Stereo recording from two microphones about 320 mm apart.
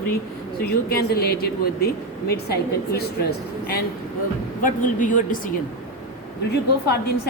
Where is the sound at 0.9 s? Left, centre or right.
Left.